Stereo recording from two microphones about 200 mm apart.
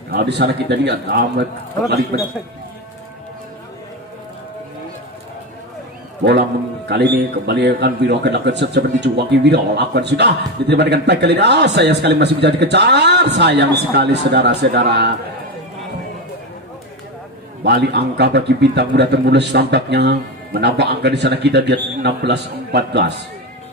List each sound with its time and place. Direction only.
0.1 s a man's voice: 55° right (ahead or behind)
6.9 s a man's voice: 55° right (ahead or behind)
17.6 s a man's voice: 60° right (ahead or behind)